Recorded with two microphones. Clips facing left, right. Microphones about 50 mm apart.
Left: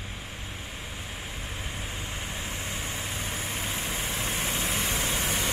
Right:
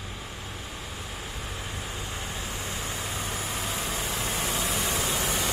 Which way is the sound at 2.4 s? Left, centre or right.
Left.